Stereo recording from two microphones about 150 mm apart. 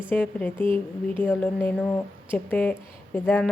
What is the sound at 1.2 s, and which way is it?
Speech, 10° left (ahead or behind).